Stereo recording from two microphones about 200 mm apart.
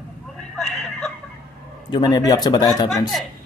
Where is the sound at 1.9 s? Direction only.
20° left (ahead or behind).